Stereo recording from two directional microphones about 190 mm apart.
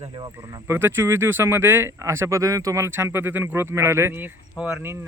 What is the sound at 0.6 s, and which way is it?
Speech, 10° right (ahead or behind).